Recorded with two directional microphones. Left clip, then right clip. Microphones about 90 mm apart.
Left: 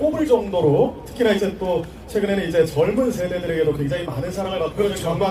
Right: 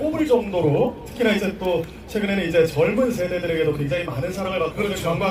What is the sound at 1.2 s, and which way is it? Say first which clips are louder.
A man's voice: left 2 dB; 15° left (ahead or behind).